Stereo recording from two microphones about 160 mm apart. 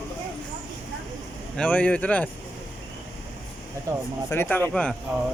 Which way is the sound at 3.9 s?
20° right (ahead or behind).